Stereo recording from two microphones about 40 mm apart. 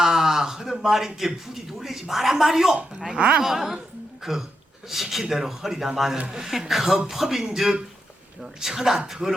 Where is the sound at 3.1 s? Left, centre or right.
Right.